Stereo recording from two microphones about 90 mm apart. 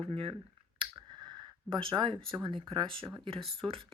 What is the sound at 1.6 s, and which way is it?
Speech, 65° right (ahead or behind).